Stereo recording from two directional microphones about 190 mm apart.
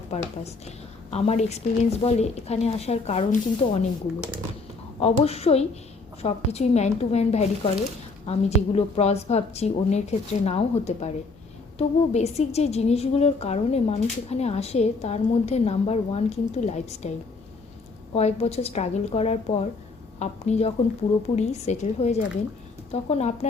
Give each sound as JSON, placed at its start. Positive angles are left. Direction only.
{"t": 0.1, "sound": "a woman's voice", "side_deg": 35}
{"t": 4.9, "sound": "a woman's voice", "side_deg": 35}
{"t": 18.1, "sound": "a woman's voice", "side_deg": 35}